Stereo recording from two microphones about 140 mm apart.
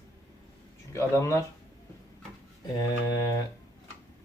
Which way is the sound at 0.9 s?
20° left (ahead or behind).